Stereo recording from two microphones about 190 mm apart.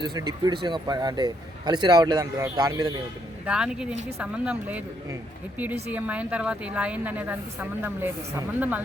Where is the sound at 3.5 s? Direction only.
5° right (ahead or behind).